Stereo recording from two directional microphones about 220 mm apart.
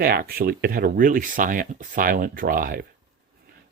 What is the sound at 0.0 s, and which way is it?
Speech, 45° right (ahead or behind).